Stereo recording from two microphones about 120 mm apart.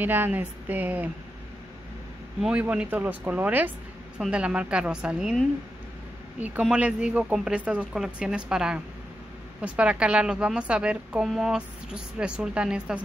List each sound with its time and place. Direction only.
0.0 s a woman's voice: 15° right (ahead or behind)
2.4 s a woman's voice: 10° right (ahead or behind)
6.4 s a woman's voice: 10° right (ahead or behind)